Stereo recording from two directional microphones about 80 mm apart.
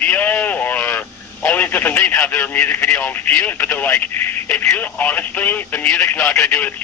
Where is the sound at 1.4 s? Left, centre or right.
Left.